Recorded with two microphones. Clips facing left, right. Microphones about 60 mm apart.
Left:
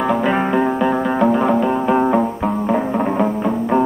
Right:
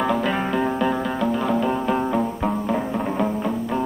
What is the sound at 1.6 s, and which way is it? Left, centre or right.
Music, centre.